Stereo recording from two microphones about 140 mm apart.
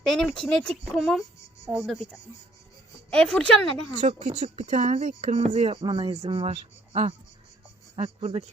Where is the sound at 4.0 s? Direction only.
50° right (ahead or behind).